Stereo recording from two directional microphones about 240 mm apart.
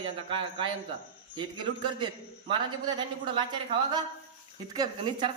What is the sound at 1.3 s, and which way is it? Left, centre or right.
A man's voice, centre.